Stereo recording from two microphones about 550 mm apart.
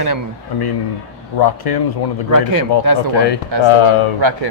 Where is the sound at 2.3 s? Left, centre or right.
Right.